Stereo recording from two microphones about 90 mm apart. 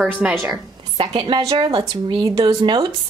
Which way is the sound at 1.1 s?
75° right (ahead or behind).